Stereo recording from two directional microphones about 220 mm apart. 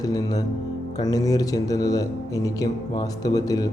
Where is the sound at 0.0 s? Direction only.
15° left (ahead or behind).